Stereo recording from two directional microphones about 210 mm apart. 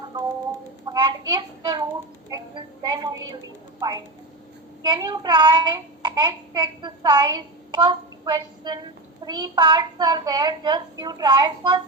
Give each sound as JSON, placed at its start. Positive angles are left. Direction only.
{"t": 0.9, "sound": "child singing", "side_deg": -20}
{"t": 3.8, "sound": "a woman's voice", "side_deg": -20}
{"t": 4.9, "sound": "child singing", "side_deg": -20}